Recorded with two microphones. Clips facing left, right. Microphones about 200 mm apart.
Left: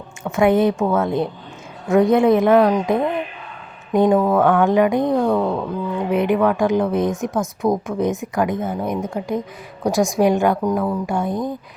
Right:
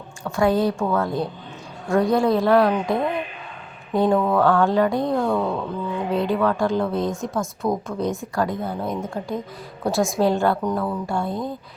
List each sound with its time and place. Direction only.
0.3 s a woman's voice: 20° left (ahead or behind)